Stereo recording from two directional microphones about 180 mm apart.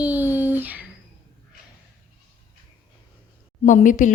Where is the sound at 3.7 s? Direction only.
45° left (ahead or behind).